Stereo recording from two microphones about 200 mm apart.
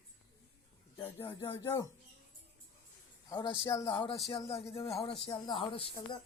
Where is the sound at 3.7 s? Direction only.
20° left (ahead or behind).